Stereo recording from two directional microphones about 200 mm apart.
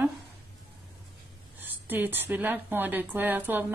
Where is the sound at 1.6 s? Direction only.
10° right (ahead or behind).